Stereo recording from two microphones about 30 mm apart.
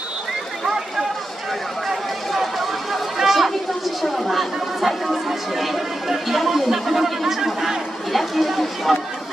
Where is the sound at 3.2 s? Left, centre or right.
Centre.